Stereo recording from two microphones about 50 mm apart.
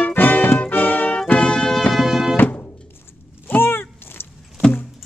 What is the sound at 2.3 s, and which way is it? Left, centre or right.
Music, left.